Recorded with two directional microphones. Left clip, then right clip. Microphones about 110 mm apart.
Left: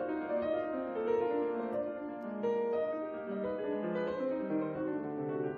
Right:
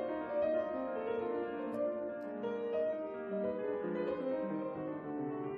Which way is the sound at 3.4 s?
20° left (ahead or behind).